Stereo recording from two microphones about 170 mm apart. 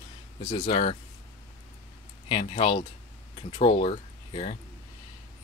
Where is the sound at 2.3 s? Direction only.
30° left (ahead or behind).